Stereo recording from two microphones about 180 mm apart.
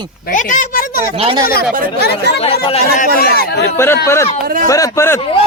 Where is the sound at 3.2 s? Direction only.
65° left (ahead or behind).